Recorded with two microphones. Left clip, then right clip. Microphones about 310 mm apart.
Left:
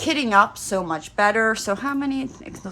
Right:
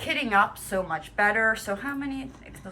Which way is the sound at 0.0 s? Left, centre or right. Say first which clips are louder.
Left 5 dB; centre.